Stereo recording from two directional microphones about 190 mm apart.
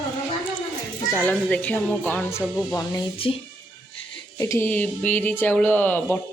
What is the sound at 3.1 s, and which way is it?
Speech, 30° left (ahead or behind).